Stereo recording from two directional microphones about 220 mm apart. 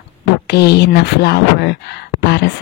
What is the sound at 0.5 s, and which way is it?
Speech, 50° left (ahead or behind).